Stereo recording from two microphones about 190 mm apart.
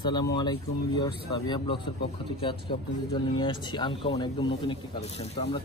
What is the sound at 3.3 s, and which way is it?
Speech, 25° left (ahead or behind).